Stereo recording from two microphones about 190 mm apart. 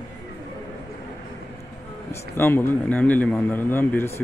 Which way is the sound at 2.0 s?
15° left (ahead or behind).